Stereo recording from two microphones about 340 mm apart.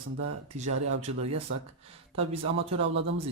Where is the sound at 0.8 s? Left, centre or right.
Centre.